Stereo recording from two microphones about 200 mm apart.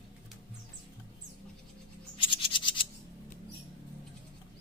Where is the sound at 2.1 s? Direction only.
25° left (ahead or behind).